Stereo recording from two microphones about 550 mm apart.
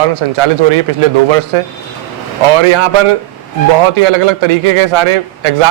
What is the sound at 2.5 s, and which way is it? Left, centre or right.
A man's voice, right.